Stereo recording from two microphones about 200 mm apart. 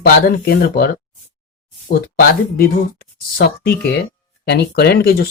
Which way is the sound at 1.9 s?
50° left (ahead or behind).